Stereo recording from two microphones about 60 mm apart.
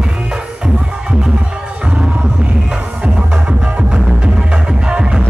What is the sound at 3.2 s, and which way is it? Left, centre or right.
Music, centre.